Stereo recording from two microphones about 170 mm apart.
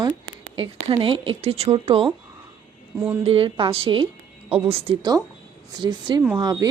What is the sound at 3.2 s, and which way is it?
Speech, 35° right (ahead or behind).